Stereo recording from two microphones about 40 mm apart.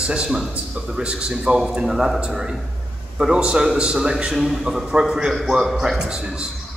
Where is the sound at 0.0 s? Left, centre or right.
Right.